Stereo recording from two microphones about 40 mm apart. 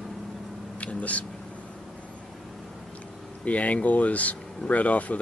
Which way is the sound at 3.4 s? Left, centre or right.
Left.